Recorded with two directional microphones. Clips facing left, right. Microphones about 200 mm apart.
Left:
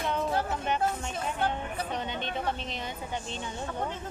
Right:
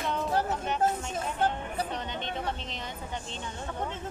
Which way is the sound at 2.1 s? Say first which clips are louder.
Left 1 dB; 10° left (ahead or behind).